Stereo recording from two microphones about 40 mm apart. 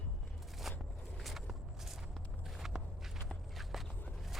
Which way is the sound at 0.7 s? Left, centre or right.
Centre.